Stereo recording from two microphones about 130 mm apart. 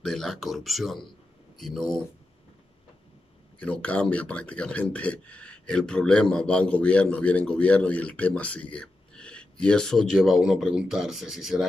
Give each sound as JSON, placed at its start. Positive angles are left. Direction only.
{"t": 0.0, "sound": "speech", "side_deg": 5}
{"t": 3.5, "sound": "speech", "side_deg": 10}